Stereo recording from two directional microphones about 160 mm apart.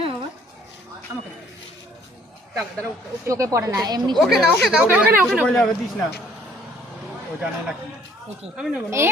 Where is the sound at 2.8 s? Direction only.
20° right (ahead or behind).